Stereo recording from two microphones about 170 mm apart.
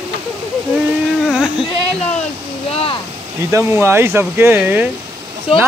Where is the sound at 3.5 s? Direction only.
15° right (ahead or behind).